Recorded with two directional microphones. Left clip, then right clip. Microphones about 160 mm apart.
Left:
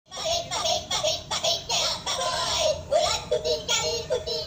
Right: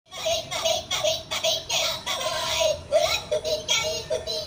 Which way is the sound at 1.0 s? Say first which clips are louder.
Right 1 dB; 30° left (ahead or behind).